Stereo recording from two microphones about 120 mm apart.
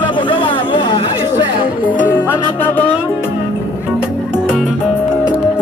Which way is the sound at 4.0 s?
5° right (ahead or behind).